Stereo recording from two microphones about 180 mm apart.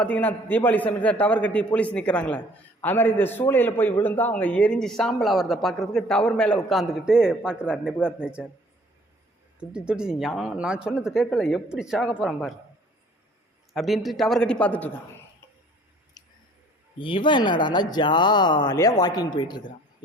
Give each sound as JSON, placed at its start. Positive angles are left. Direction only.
{"t": 0.0, "sound": "a man's voice", "side_deg": 10}
{"t": 9.6, "sound": "speech", "side_deg": -5}
{"t": 13.7, "sound": "speech", "side_deg": 0}
{"t": 16.2, "sound": "a sound", "side_deg": 20}
{"t": 17.0, "sound": "speech", "side_deg": 25}